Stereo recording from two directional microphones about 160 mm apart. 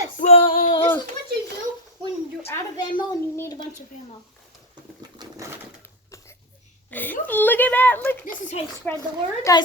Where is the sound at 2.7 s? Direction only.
30° left (ahead or behind).